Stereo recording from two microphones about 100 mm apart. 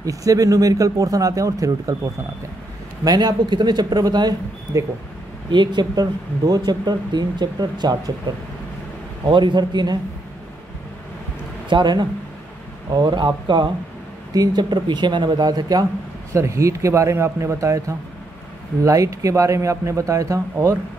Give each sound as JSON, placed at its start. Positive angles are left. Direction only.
{"t": 0.0, "sound": "a man's voice", "side_deg": -35}
{"t": 3.0, "sound": "speech", "side_deg": -40}
{"t": 4.7, "sound": "a man's voice", "side_deg": -30}
{"t": 5.5, "sound": "speech", "side_deg": -50}
{"t": 11.7, "sound": "speech", "side_deg": -50}
{"t": 16.3, "sound": "a man's voice", "side_deg": -30}